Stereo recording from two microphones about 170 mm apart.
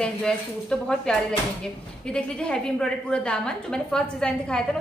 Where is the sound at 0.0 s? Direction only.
5° left (ahead or behind).